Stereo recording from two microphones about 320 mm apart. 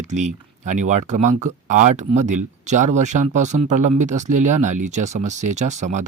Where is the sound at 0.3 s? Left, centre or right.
Right.